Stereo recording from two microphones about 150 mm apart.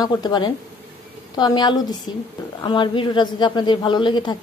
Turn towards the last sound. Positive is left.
turn(degrees=30)  # may be behind; listen again after turning